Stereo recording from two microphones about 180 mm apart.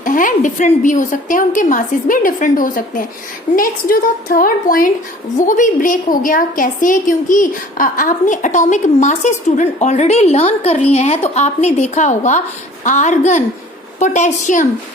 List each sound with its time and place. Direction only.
0.0 s a woman's voice: 45° left (ahead or behind)